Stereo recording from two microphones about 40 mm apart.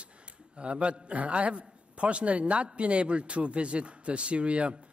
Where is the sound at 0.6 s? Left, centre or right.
Right.